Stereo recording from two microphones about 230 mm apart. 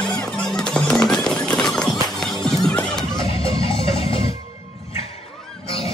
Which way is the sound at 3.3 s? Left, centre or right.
Left.